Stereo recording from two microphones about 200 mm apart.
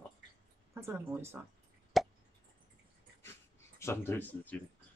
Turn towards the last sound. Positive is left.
turn(degrees=10)  # may be behind; listen again after turning